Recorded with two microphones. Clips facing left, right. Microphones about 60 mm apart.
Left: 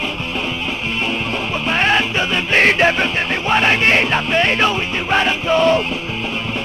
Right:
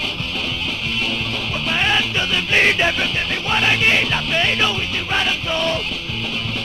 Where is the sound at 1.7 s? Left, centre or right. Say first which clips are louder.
Left 3 dB; left.